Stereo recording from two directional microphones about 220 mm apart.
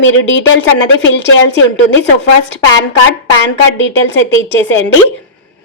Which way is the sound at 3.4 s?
55° left (ahead or behind).